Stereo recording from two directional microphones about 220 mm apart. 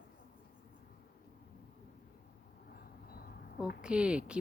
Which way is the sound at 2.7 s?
45° left (ahead or behind).